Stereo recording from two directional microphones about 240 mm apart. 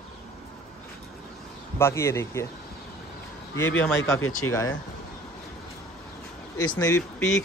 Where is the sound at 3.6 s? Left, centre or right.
Centre.